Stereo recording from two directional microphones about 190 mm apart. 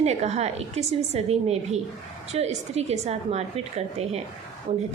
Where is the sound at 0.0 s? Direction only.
35° right (ahead or behind).